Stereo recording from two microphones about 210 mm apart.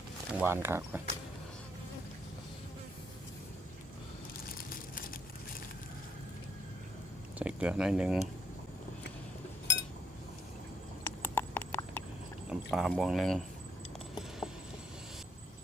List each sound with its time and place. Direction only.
0.3 s speech: 10° right (ahead or behind)
4.4 s crushing: 45° left (ahead or behind)
7.3 s speech: 5° right (ahead or behind)
11.2 s clip-clop: 10° left (ahead or behind)
12.5 s speech: centre (ahead or behind)
14.2 s a sound: centre (ahead or behind)